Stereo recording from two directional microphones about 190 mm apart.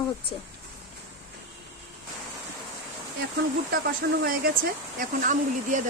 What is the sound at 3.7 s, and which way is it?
Speech, 50° right (ahead or behind).